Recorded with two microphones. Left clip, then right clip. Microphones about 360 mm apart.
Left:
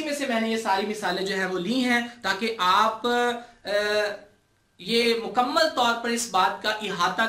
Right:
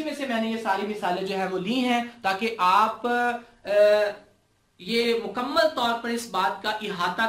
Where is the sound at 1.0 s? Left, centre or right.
Centre.